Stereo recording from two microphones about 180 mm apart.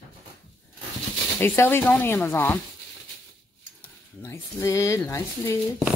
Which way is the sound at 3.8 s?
15° left (ahead or behind).